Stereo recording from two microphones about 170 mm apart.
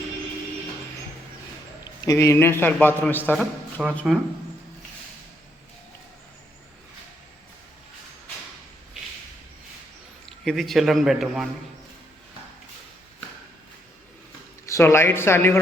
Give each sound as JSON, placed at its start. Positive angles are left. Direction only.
{"t": 1.8, "sound": "a man's voice", "side_deg": 20}
{"t": 3.3, "sound": "a man's voice", "side_deg": 0}
{"t": 10.2, "sound": "a man's voice", "side_deg": 0}
{"t": 14.7, "sound": "speech", "side_deg": 15}